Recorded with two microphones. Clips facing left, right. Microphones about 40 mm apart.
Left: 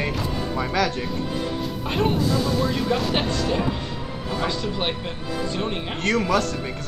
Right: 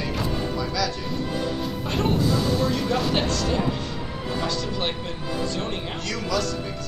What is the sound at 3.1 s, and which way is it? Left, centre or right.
Speech, left.